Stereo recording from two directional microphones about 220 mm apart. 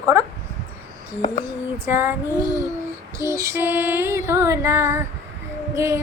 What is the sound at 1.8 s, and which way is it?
Female singing, 10° right (ahead or behind).